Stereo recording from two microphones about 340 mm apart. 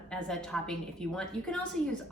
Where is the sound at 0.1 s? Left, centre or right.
Centre.